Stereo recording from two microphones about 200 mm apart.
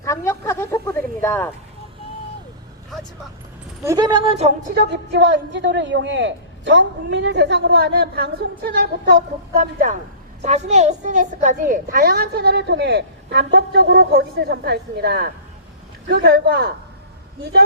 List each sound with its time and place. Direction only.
0.0 s a sound: 15° left (ahead or behind)
3.8 s speech: 20° right (ahead or behind)
4.7 s a woman's voice: 55° right (ahead or behind)